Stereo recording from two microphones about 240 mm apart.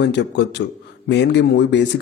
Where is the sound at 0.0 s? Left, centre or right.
Left.